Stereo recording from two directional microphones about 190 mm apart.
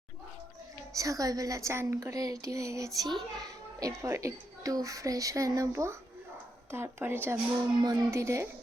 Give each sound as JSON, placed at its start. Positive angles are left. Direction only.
{"t": 0.9, "sound": "a woman's voice", "side_deg": -15}